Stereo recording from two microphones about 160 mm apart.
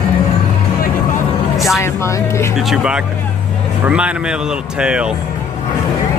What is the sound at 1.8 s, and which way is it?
Speech, 20° left (ahead or behind).